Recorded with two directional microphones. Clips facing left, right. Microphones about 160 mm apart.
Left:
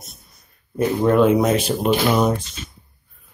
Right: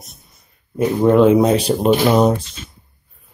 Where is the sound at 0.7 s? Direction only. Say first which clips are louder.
Right 3 dB; 20° right (ahead or behind).